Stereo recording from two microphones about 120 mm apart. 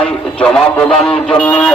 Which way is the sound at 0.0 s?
10° left (ahead or behind).